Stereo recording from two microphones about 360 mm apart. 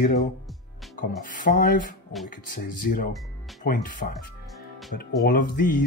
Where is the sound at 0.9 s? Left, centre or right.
Left.